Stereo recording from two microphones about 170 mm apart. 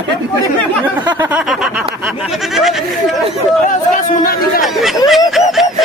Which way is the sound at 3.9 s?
55° left (ahead or behind).